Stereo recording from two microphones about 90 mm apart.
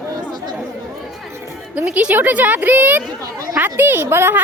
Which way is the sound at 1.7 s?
15° right (ahead or behind).